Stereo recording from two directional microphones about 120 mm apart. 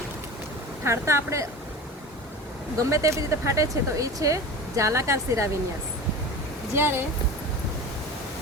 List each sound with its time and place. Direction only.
0.9 s speech: 25° right (ahead or behind)
2.7 s speech: 25° right (ahead or behind)
6.7 s speech: 20° right (ahead or behind)